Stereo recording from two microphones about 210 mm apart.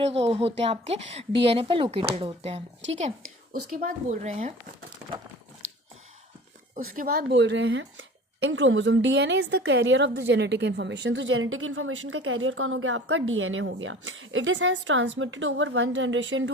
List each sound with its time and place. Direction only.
0.0 s speech: 30° right (ahead or behind)
3.7 s speech: 40° right (ahead or behind)
5.6 s a sound: 75° right (ahead or behind)
6.9 s a woman's voice: 45° right (ahead or behind); by 16.5 s 65° right (ahead or behind)